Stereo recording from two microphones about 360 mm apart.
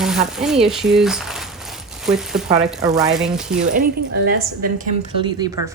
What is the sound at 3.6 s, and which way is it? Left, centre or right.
Speech, right.